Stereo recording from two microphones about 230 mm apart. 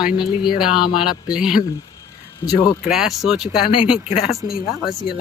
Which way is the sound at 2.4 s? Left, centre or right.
Centre.